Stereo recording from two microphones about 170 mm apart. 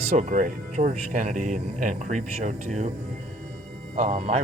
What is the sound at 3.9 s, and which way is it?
Speech, 40° right (ahead or behind).